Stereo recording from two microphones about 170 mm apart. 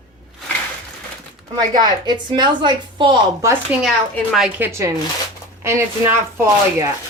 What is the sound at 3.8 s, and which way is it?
Speech, centre (ahead or behind).